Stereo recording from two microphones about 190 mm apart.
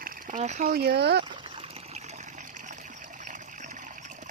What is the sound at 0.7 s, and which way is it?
Speech, 55° right (ahead or behind).